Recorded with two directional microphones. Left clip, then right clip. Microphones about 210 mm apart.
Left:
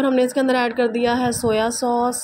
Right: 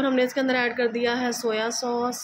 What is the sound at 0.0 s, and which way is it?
Speech, 25° left (ahead or behind).